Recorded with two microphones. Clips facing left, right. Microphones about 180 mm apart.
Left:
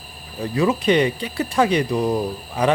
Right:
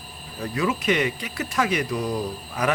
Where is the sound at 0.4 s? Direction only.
30° left (ahead or behind).